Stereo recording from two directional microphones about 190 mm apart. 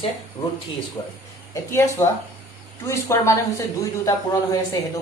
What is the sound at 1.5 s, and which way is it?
Speech, 15° left (ahead or behind).